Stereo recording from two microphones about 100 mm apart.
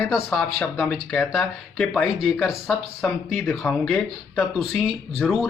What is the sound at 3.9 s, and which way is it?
Speech, 15° left (ahead or behind).